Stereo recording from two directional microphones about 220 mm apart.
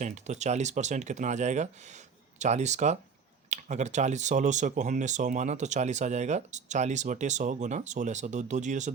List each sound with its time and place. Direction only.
0.0 s speech: 30° right (ahead or behind)